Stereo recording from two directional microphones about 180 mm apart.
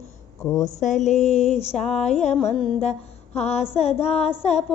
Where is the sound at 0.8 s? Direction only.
40° left (ahead or behind).